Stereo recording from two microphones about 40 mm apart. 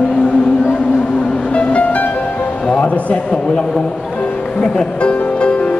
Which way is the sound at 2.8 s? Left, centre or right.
Left.